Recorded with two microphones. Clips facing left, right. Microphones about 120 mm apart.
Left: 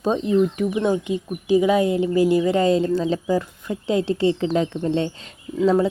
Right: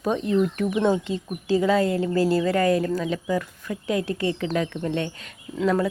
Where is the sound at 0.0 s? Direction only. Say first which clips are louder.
Left 3 dB; 25° left (ahead or behind).